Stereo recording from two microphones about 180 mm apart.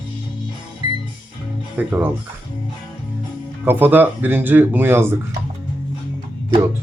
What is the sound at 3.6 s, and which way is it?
Speech, 10° right (ahead or behind).